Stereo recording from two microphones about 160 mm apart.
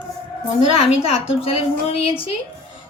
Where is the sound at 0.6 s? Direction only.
40° left (ahead or behind).